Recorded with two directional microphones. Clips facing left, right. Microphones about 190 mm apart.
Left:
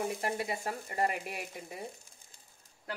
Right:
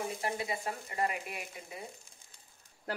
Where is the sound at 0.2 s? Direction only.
45° left (ahead or behind).